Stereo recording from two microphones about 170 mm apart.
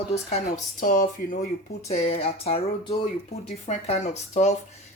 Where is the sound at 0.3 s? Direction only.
45° left (ahead or behind).